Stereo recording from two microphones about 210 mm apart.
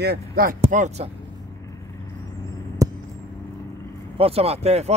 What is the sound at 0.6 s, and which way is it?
Speech, 35° right (ahead or behind).